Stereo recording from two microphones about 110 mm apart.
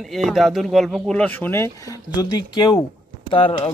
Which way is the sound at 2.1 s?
40° left (ahead or behind).